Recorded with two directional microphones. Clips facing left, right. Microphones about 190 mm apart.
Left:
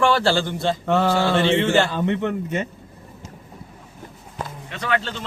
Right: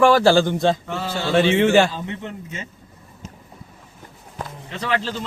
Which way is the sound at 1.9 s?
65° left (ahead or behind).